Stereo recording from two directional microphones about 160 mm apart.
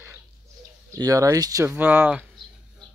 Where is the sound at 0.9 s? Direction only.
20° right (ahead or behind).